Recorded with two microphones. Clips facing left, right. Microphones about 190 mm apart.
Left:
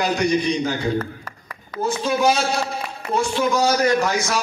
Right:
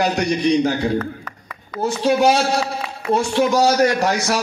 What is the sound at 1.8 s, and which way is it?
Speech, 70° right (ahead or behind).